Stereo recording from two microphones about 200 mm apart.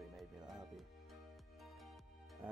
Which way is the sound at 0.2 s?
Centre (ahead or behind).